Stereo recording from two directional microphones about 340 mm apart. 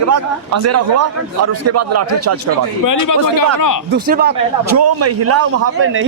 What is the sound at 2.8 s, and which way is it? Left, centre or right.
Speech, left.